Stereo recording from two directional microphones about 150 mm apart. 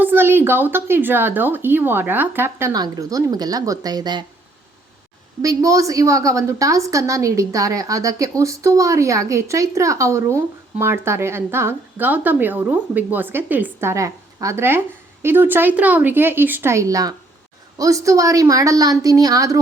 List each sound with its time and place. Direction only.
0.0 s speech: 15° right (ahead or behind); by 4.3 s 30° right (ahead or behind)
5.4 s a woman's voice: 25° right (ahead or behind)